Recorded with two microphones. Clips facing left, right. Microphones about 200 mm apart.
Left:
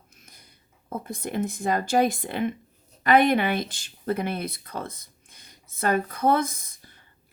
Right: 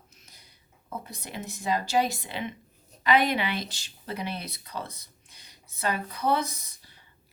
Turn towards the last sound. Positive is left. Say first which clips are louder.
# left 1 dB
turn(degrees=50)  # may be behind; listen again after turning